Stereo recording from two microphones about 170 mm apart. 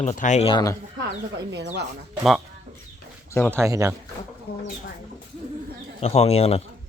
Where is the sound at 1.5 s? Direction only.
85° right.